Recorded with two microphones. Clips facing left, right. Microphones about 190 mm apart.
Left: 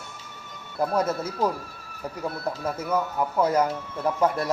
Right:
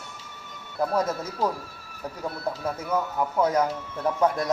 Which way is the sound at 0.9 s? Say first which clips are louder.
Left 1 dB; 10° left (ahead or behind).